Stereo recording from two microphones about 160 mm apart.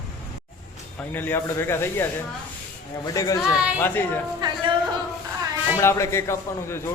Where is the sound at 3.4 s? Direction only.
5° right (ahead or behind).